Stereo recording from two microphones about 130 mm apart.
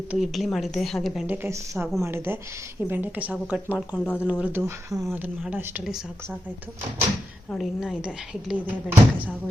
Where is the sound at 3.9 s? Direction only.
15° left (ahead or behind).